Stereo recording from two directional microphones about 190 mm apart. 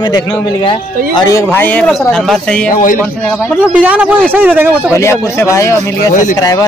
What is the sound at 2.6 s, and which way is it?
Speech, 45° left (ahead or behind).